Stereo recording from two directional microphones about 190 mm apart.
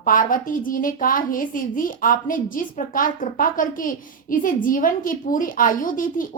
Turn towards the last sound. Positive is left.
turn(degrees=45)  # may be behind; listen again after turning